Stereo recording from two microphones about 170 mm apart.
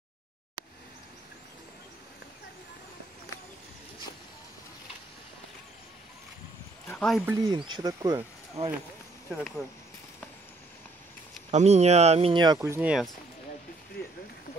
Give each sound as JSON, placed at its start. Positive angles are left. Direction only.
{"t": 6.9, "sound": "speech", "side_deg": 5}
{"t": 7.2, "sound": "speech", "side_deg": -25}
{"t": 9.3, "sound": "speech", "side_deg": 0}
{"t": 11.5, "sound": "speech", "side_deg": -40}